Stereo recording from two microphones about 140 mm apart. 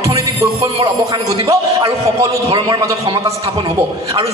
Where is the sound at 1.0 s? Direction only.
25° right (ahead or behind).